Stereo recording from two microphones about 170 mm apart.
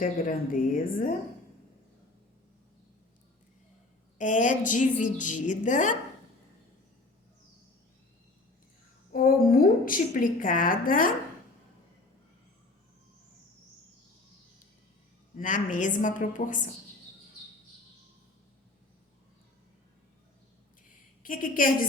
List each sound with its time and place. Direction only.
0.0 s a woman's voice: 55° left (ahead or behind)
4.2 s a woman's voice: 50° left (ahead or behind)
9.1 s a woman's voice: 55° left (ahead or behind)
15.4 s a woman's voice: 50° left (ahead or behind)
21.2 s a woman's voice: 55° left (ahead or behind)